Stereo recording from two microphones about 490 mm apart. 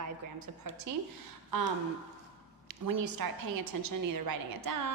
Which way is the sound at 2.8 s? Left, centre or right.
Right.